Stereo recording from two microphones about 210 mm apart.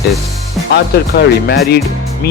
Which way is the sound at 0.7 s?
50° left (ahead or behind).